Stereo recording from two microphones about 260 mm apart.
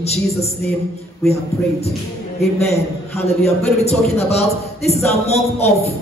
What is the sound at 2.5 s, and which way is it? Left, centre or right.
A man's voice, left.